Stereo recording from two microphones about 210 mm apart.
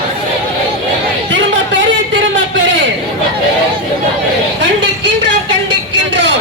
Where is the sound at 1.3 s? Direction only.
60° right (ahead or behind).